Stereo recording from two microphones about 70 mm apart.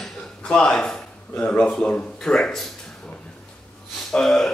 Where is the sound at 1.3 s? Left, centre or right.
Left.